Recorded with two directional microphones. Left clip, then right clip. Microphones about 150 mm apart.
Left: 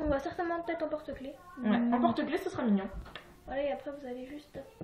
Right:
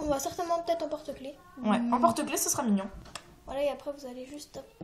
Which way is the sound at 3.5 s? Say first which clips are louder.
Right 3 dB; 50° right (ahead or behind).